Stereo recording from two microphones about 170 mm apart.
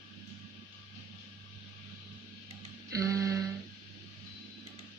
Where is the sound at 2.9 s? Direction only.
20° right (ahead or behind).